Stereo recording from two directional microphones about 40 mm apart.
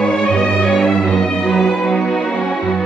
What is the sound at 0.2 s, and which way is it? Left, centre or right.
Music, centre.